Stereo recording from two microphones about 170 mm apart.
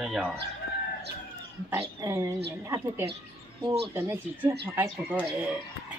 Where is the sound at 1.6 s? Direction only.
15° right (ahead or behind).